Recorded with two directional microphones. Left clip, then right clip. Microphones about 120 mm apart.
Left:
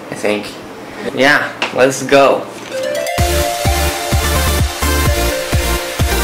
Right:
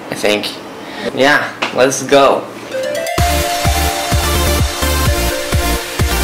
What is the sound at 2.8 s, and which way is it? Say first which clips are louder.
Music: even; centre (ahead or behind).